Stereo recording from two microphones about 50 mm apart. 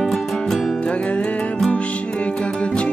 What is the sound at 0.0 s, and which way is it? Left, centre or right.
Music, centre.